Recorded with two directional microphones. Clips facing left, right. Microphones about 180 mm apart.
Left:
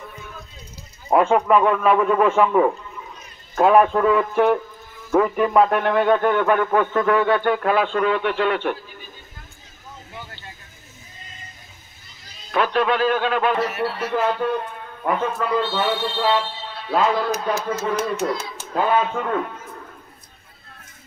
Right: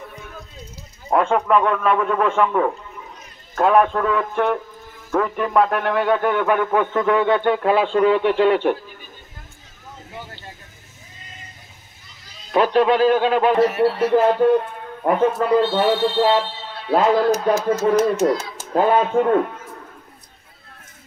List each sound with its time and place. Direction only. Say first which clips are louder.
1.1 s a man's voice: left 1 dB; 5° left (ahead or behind); by 8.7 s 30° right (ahead or behind)
12.4 s speech: right 4 dB; 35° right (ahead or behind)